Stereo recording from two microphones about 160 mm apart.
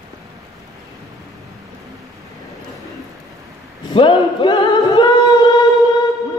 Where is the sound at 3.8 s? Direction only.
30° left (ahead or behind).